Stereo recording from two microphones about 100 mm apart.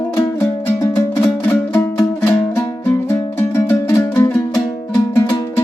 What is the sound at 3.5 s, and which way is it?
Music, 25° left (ahead or behind).